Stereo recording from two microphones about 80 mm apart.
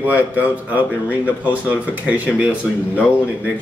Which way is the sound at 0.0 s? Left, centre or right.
Right.